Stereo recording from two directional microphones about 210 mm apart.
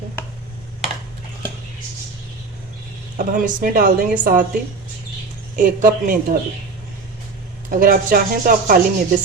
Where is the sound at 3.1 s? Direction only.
40° right (ahead or behind).